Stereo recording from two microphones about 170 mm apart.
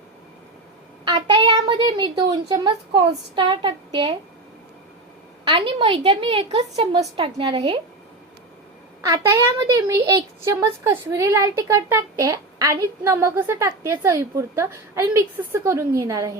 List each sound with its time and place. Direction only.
1.0 s a child's voice: 25° right (ahead or behind)
5.5 s a woman's voice: 30° right (ahead or behind)
9.0 s a woman's voice: 20° right (ahead or behind)